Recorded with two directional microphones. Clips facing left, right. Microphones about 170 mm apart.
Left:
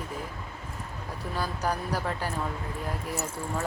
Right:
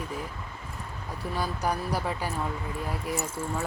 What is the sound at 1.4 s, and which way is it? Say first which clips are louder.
Speech: right 1 dB; 10° right (ahead or behind).